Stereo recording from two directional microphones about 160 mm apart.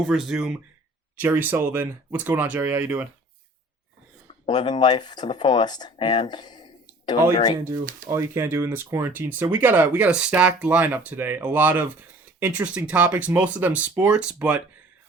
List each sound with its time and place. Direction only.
0.0 s speech: 5° right (ahead or behind)
4.4 s speech: 30° left (ahead or behind)
7.6 s speech: 20° right (ahead or behind)